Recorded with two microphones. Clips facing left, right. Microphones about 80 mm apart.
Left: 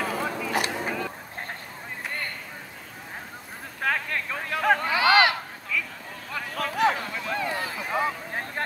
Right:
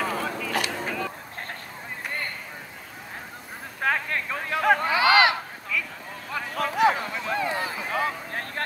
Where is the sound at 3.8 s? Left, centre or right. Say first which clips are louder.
Right 1 dB; right.